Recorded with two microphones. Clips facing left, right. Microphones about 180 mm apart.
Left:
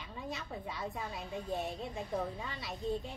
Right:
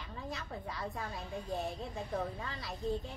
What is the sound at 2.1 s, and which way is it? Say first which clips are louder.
Speech: even; centre (ahead or behind).